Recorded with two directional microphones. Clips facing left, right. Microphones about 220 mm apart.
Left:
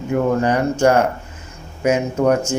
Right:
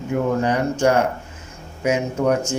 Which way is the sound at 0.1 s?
50° left (ahead or behind).